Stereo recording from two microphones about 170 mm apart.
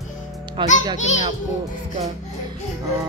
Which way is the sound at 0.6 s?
25° right (ahead or behind).